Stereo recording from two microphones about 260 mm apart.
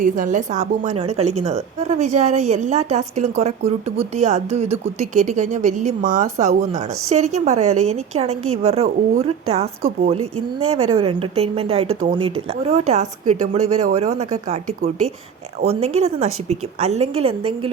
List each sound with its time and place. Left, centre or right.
0.0 s a woman's voice: right